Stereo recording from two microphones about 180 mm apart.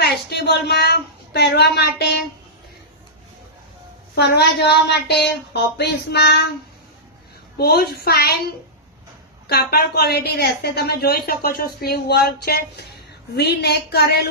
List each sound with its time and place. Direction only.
0.0 s a woman's voice: 65° left (ahead or behind)
4.1 s speech: 65° left (ahead or behind)
7.6 s a woman's voice: 60° left (ahead or behind)
9.5 s a woman's voice: 60° left (ahead or behind)